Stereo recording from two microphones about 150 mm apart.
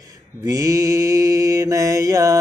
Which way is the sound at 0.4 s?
25° right (ahead or behind).